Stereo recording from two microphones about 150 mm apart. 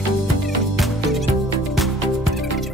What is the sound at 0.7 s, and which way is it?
Music, centre (ahead or behind).